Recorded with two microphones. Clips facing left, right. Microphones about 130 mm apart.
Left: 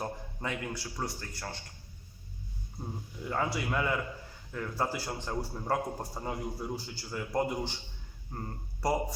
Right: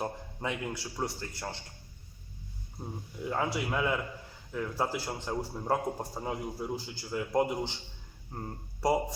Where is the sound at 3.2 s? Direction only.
5° right (ahead or behind).